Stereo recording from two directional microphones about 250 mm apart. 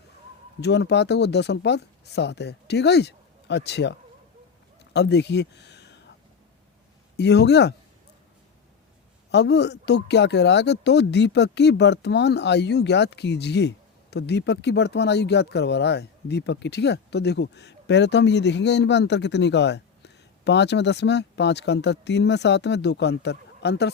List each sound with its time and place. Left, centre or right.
0.6 s speech: left
4.9 s speech: left
7.2 s speech: left
9.3 s speech: left